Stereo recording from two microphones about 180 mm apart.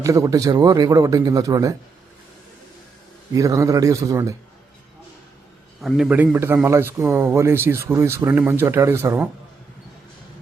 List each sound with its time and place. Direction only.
0.0 s a man's voice: 15° right (ahead or behind)
3.3 s speech: 20° right (ahead or behind)
5.8 s a man's voice: centre (ahead or behind)